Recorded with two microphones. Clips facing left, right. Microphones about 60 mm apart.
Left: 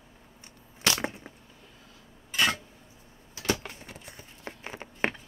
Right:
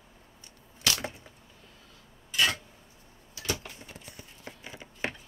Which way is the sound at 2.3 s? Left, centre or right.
Left.